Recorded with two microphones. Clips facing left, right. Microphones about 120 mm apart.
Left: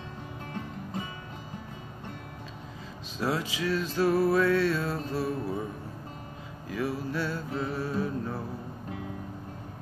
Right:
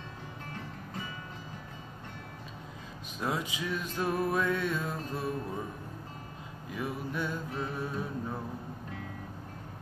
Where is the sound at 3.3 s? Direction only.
90° left.